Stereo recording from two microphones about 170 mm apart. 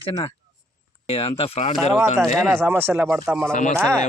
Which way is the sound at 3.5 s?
50° left (ahead or behind).